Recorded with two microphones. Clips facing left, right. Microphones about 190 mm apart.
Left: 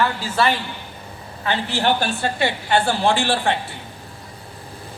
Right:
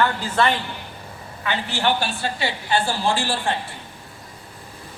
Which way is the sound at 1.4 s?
35° left (ahead or behind).